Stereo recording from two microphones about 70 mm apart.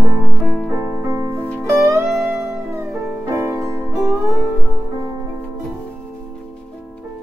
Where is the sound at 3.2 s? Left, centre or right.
Right.